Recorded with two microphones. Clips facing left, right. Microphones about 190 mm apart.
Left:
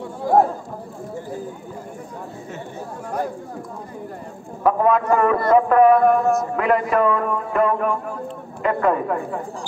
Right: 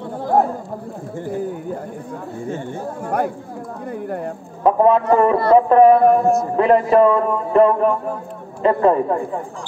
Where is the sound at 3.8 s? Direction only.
65° right (ahead or behind).